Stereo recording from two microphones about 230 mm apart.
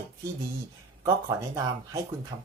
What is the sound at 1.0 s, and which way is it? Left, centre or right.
Speech, centre.